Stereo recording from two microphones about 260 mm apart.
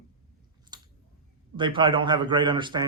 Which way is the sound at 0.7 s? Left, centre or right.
Centre.